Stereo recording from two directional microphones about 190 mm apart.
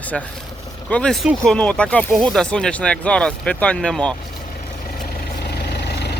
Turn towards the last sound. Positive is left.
turn(degrees=60)  # may be behind; listen again after turning